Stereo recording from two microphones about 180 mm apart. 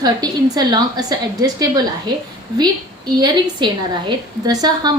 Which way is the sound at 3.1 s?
25° right (ahead or behind).